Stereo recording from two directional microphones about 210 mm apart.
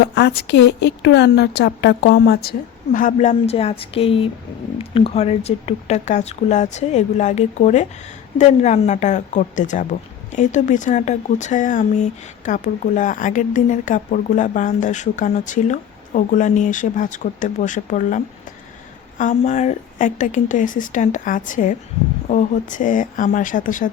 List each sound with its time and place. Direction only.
0.0 s a woman's voice: 55° left (ahead or behind); by 18.2 s 35° left (ahead or behind)
19.2 s speech: 35° left (ahead or behind)